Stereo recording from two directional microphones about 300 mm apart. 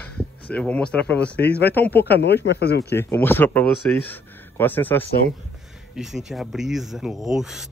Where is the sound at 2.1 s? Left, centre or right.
Left.